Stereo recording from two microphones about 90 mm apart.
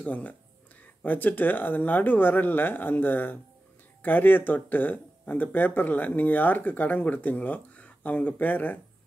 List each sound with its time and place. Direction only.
0.0 s speech: 15° left (ahead or behind)